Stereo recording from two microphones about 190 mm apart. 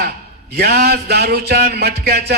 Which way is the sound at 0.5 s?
55° right (ahead or behind).